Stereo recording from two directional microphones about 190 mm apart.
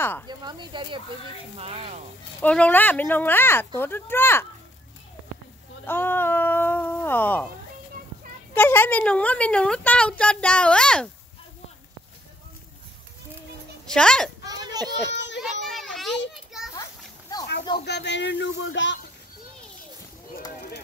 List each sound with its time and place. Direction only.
0.3 s speech: 20° right (ahead or behind)
2.4 s speech: 5° left (ahead or behind)
5.9 s speech: 10° left (ahead or behind)
8.5 s speech: 10° left (ahead or behind)
13.8 s speech: 5° left (ahead or behind)
14.4 s children playing: 20° right (ahead or behind)
15.0 s a child's voice: 70° left (ahead or behind)
15.6 s children playing: centre (ahead or behind)
17.3 s a sound: 20° left (ahead or behind)
17.7 s a man's voice: 60° left (ahead or behind); by 18.9 s 75° left (ahead or behind)